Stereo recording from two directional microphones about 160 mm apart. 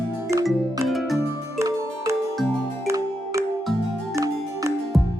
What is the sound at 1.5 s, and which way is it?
Music, 20° right (ahead or behind).